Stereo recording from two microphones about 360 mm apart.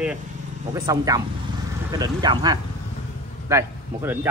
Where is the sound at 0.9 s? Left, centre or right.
Centre.